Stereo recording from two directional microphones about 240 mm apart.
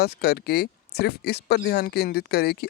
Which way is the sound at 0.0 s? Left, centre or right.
Left.